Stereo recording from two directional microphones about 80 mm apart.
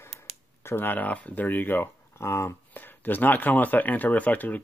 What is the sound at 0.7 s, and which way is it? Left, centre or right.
Speech, left.